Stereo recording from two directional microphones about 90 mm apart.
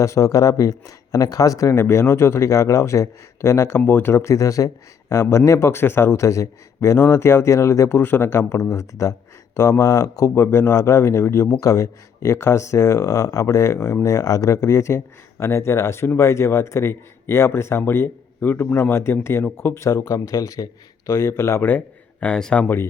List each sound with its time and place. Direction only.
0.0 s speech: 35° left (ahead or behind)
10.3 s speech: 25° left (ahead or behind); by 22.7 s 5° left (ahead or behind)